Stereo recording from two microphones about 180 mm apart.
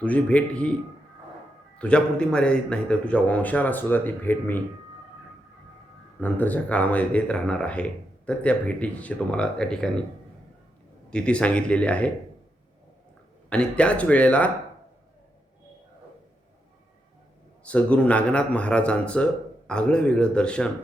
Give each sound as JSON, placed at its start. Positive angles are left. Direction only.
{"t": 0.0, "sound": "speech", "side_deg": 10}
{"t": 1.8, "sound": "speech", "side_deg": 5}
{"t": 6.1, "sound": "speech", "side_deg": 10}
{"t": 11.1, "sound": "speech", "side_deg": 5}
{"t": 13.5, "sound": "speech", "side_deg": 5}
{"t": 17.6, "sound": "speech", "side_deg": 5}